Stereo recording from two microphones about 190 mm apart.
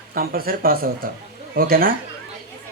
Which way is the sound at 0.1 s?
50° right (ahead or behind).